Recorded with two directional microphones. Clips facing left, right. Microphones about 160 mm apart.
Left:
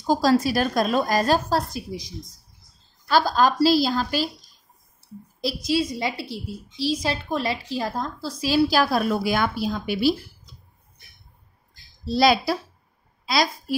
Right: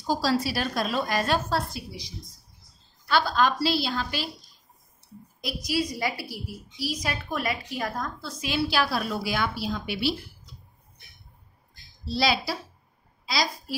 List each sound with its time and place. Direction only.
0.0 s a woman's voice: 45° left (ahead or behind)
5.4 s a woman's voice: 30° left (ahead or behind)
12.1 s a woman's voice: 50° left (ahead or behind)